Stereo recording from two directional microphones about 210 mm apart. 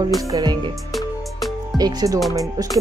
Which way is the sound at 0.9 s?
Centre (ahead or behind).